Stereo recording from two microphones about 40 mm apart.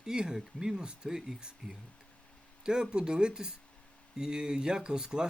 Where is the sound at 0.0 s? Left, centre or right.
Centre.